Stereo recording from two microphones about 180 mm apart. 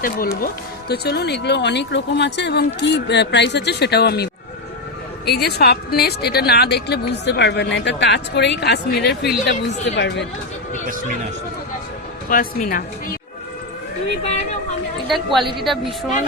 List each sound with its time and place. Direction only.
0.0 s speech: 55° left (ahead or behind)
9.9 s speech: 75° left (ahead or behind)
12.3 s speech: 50° left (ahead or behind)
15.0 s a woman's voice: centre (ahead or behind)